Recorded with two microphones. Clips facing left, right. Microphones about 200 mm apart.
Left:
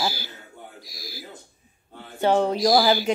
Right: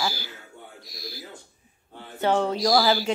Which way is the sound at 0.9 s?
Centre (ahead or behind).